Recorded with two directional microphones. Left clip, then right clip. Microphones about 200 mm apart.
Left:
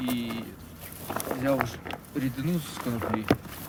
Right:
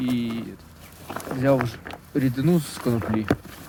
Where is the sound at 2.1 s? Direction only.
50° right (ahead or behind).